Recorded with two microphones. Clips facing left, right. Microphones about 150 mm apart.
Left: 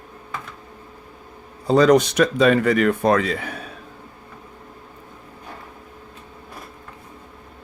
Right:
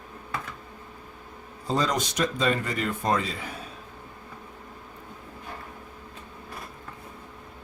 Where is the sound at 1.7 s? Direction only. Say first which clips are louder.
Left 12 dB; 70° left (ahead or behind).